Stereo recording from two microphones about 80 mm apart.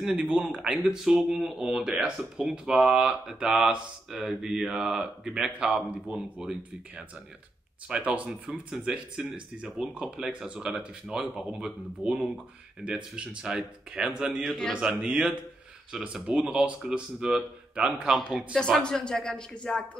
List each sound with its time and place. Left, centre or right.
0.0 s speech: centre
7.9 s speech: centre
14.4 s a man's voice: centre
14.7 s speech: centre
18.6 s speech: centre